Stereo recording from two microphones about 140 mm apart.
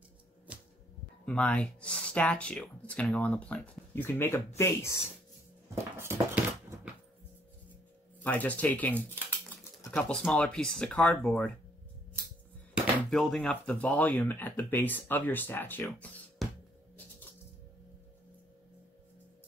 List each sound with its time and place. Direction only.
0.5 s a sound: 10° right (ahead or behind)
1.2 s speech: 10° left (ahead or behind)
5.8 s a sound: 20° right (ahead or behind)
8.2 s speech: 10° left (ahead or behind)
13.1 s speech: 5° left (ahead or behind)
16.4 s music: centre (ahead or behind)